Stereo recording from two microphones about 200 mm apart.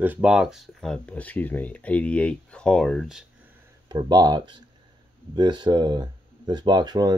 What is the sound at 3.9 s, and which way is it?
Speech, 20° right (ahead or behind).